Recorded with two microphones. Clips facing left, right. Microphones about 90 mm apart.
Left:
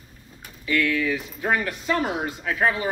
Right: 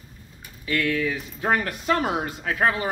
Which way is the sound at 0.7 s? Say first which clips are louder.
Left 1 dB; 35° right (ahead or behind).